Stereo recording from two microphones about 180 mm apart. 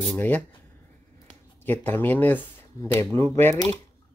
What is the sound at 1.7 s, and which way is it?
Speech, 10° left (ahead or behind).